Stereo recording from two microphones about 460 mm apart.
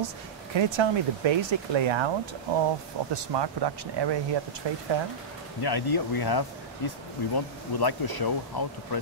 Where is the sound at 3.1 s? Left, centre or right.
Right.